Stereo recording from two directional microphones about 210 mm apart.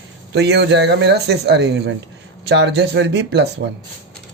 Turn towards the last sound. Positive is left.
turn(degrees=-55)  # may be behind; listen again after turning